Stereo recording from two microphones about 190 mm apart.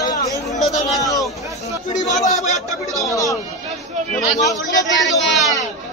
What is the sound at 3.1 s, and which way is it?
Speech, 15° left (ahead or behind).